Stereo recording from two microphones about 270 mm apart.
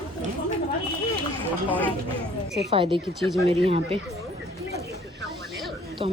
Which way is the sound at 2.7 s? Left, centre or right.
Centre.